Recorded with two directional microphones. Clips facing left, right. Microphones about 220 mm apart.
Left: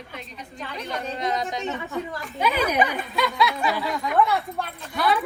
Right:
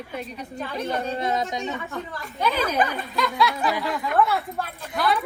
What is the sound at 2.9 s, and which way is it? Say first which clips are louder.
A woman's voice: even; centre (ahead or behind).